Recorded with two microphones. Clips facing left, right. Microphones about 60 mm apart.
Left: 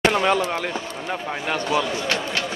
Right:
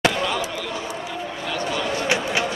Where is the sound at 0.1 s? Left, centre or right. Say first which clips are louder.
Left 5 dB; left.